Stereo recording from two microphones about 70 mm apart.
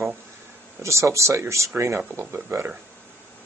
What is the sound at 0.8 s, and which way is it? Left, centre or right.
Speech, right.